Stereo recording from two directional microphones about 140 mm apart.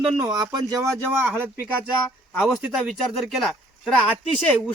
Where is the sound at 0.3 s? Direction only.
25° right (ahead or behind).